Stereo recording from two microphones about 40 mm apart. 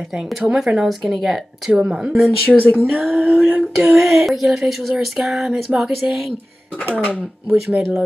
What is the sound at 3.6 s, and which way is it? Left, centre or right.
Speech, centre.